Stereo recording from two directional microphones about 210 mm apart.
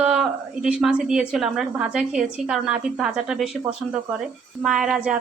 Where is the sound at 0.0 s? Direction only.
5° right (ahead or behind).